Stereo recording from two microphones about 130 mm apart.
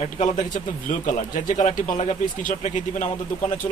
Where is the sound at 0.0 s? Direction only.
65° left (ahead or behind).